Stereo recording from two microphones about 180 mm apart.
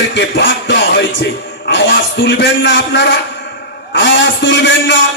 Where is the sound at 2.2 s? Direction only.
85° left.